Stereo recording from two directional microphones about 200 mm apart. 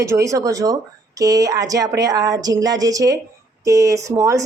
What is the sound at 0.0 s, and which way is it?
A woman's voice, 15° right (ahead or behind).